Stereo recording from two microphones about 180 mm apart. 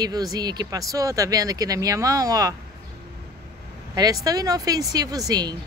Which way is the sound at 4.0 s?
20° right (ahead or behind).